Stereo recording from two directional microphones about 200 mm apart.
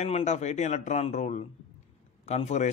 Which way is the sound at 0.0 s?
35° left (ahead or behind).